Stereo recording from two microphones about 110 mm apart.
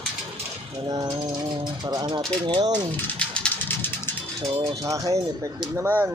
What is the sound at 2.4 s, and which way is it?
Speech, 45° right (ahead or behind).